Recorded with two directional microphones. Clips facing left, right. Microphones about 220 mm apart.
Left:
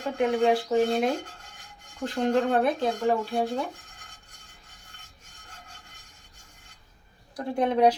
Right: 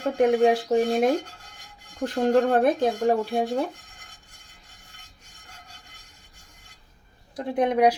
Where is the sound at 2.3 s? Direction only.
50° right (ahead or behind).